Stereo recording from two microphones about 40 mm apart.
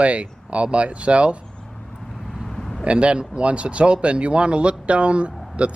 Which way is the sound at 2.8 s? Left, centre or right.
Right.